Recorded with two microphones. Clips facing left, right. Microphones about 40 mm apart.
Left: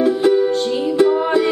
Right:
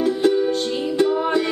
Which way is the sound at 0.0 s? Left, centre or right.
Centre.